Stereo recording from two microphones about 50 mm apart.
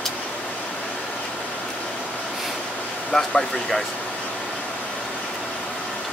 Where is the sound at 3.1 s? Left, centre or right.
Centre.